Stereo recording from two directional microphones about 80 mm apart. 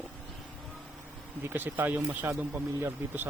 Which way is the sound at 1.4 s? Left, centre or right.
Right.